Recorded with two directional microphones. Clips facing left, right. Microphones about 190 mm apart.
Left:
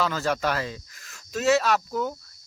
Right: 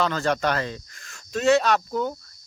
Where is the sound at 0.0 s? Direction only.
5° left (ahead or behind).